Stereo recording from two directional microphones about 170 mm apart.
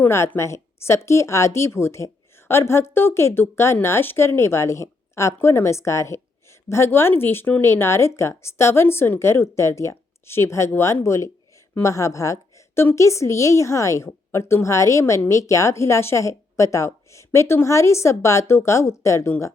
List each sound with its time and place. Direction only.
0.0 s a woman's voice: 10° left (ahead or behind)